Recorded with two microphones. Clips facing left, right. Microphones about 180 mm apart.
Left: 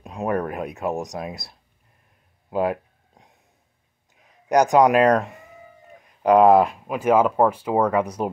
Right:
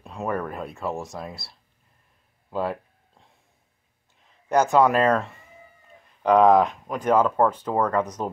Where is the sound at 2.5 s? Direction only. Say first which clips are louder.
Left 4 dB; 15° left (ahead or behind).